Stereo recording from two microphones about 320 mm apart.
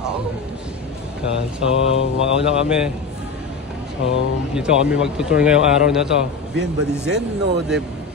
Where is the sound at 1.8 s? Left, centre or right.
Centre.